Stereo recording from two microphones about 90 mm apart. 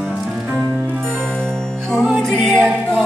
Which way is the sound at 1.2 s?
10° left (ahead or behind).